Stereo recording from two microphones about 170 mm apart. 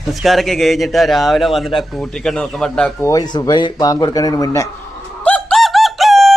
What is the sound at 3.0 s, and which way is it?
Speech, 20° left (ahead or behind).